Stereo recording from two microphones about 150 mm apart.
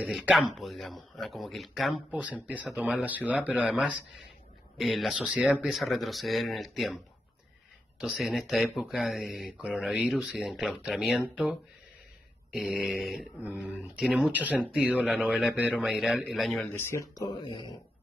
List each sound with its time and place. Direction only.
0.0 s speech: 10° right (ahead or behind)
8.0 s speech: centre (ahead or behind)
12.5 s speech: centre (ahead or behind)
16.6 s speech: 15° left (ahead or behind)
17.2 s speech: 30° left (ahead or behind)